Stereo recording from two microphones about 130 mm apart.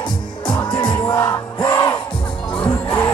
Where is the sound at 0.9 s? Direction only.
30° left (ahead or behind).